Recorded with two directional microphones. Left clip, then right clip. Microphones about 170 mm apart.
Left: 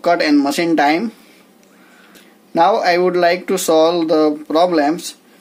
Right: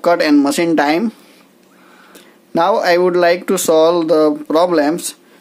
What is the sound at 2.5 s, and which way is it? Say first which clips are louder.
Speech: even; 30° right (ahead or behind).